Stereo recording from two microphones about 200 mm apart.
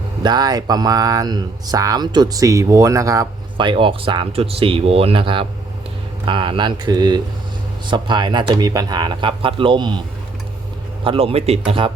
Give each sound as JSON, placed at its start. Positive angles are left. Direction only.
{"t": 0.2, "sound": "speech", "side_deg": -20}
{"t": 11.0, "sound": "speech", "side_deg": -25}